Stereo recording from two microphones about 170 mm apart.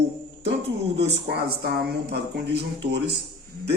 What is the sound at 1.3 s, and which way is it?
A man's voice, 70° right (ahead or behind).